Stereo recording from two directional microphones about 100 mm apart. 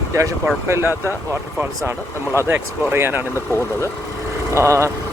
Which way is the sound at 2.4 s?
25° right (ahead or behind).